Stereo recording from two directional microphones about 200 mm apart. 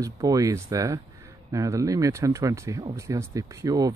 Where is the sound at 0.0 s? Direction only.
15° right (ahead or behind).